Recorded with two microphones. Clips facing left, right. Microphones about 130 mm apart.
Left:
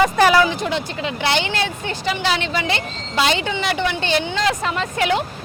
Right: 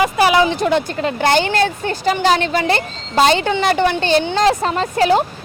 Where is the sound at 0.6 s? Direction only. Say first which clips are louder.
Right 6 dB; 50° right (ahead or behind).